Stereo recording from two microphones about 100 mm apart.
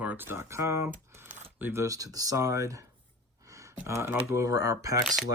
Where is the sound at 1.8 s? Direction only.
35° right (ahead or behind).